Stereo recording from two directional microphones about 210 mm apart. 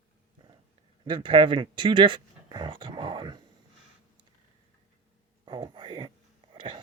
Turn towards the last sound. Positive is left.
turn(degrees=-25)  # may be behind; listen again after turning